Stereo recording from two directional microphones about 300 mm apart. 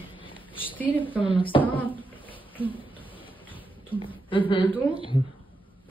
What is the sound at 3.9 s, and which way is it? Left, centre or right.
A woman's voice, centre.